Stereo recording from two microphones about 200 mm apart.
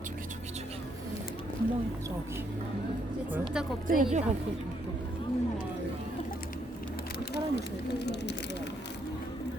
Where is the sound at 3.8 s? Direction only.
45° right (ahead or behind).